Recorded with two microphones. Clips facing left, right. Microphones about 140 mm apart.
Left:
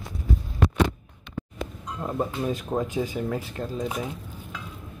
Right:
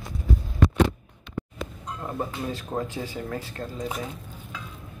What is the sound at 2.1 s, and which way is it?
Speech, 20° left (ahead or behind).